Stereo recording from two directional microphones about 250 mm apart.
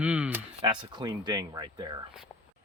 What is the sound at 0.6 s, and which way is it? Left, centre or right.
Speech, centre.